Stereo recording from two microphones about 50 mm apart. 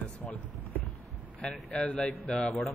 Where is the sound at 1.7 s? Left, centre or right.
Left.